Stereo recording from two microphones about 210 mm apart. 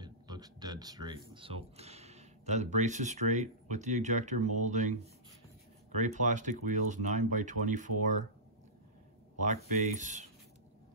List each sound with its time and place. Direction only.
0.0 s a sound: 20° right (ahead or behind)
1.3 s speech: 25° right (ahead or behind)
9.4 s speech: 35° right (ahead or behind)